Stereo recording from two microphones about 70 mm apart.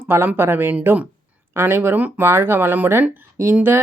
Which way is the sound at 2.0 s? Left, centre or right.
Right.